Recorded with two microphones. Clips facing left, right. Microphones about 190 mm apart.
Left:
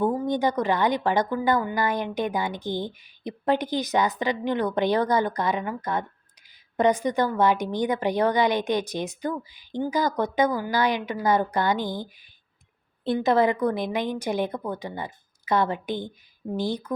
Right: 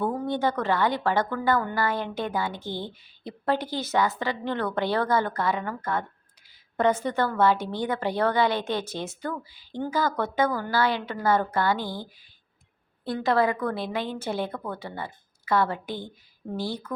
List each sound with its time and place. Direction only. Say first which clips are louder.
0.0 s a woman's voice: left 3 dB; 10° left (ahead or behind)